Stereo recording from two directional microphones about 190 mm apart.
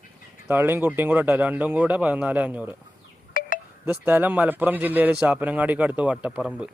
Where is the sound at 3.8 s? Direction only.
10° right (ahead or behind).